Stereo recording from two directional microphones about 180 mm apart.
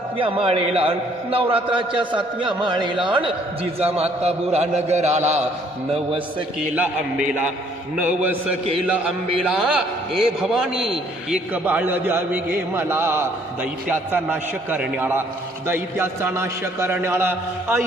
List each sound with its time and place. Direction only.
0.2 s a man's voice: 30° right (ahead or behind)
6.7 s a man's voice: 5° right (ahead or behind)